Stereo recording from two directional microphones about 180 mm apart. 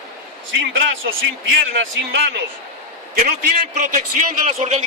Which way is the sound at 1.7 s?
75° right (ahead or behind).